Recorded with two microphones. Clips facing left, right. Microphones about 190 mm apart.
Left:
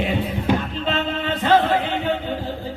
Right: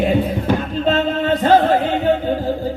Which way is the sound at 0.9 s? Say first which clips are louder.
Right 7 dB; 40° right (ahead or behind).